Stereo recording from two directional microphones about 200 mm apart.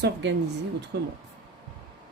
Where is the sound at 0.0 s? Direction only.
60° right (ahead or behind).